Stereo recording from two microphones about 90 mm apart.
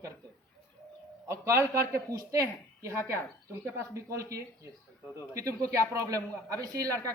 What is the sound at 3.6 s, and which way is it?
A woman's voice, 35° right (ahead or behind).